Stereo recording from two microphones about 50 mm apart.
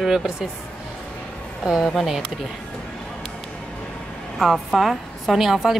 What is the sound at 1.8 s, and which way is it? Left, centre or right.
Speech, centre.